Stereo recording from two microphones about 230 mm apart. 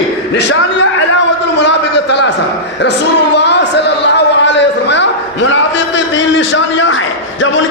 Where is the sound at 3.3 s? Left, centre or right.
Left.